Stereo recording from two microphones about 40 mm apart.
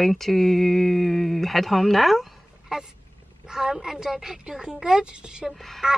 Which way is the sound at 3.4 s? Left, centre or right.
Centre.